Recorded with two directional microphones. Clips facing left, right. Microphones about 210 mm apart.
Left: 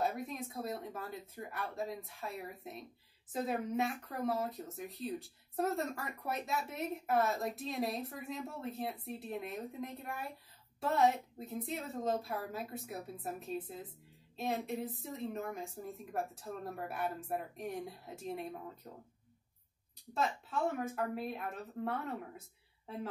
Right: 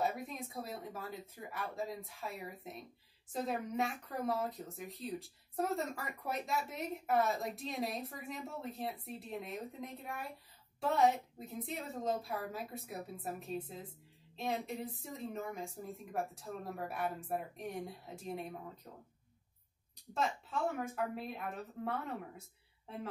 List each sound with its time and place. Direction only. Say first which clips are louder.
0.0 s speech: left 1 dB; centre (ahead or behind)
20.2 s speech: left 1 dB; centre (ahead or behind)